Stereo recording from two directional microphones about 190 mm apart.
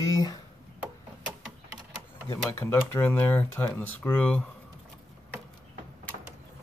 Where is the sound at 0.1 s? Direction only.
20° left (ahead or behind).